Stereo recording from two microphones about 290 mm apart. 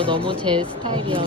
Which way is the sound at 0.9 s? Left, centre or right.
Centre.